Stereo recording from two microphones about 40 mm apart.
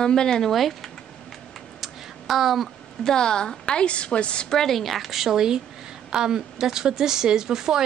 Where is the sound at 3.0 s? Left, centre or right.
Centre.